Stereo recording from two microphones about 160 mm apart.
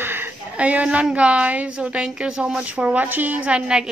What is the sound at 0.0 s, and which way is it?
A woman's voice, 10° right (ahead or behind).